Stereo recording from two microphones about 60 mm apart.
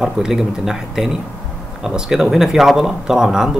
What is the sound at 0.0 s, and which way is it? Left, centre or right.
Speech, centre.